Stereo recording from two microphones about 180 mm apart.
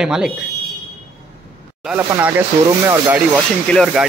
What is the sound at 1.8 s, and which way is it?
Speech, 5° right (ahead or behind).